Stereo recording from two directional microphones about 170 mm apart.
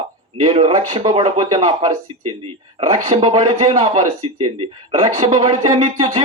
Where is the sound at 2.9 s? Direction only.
30° right (ahead or behind).